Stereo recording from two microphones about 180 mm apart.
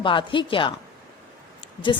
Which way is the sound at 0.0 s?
25° left (ahead or behind).